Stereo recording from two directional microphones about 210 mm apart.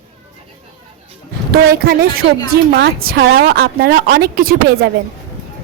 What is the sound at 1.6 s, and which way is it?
A woman's voice, 45° right (ahead or behind).